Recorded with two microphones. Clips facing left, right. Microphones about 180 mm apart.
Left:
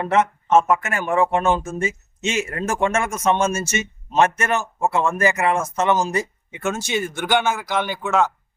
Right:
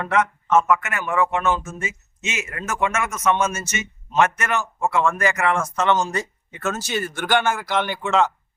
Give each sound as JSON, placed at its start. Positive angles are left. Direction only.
{"t": 0.0, "sound": "a man's voice", "side_deg": 25}